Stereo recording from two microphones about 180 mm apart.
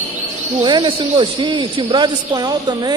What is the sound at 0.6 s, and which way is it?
Speech, 25° right (ahead or behind).